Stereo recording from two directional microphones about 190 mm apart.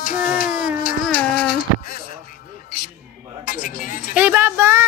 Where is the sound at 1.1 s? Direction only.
55° left (ahead or behind).